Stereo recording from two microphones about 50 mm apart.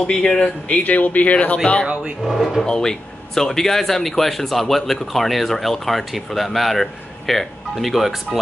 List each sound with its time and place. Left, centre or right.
0.0 s speech: centre
0.7 s speech: left
2.2 s speech: centre
2.6 s speech: centre